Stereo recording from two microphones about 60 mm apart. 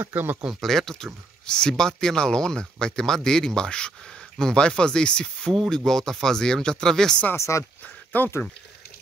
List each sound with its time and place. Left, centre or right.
0.0 s speech: right
0.6 s speech: centre
7.3 s speech: left
7.8 s a sound: left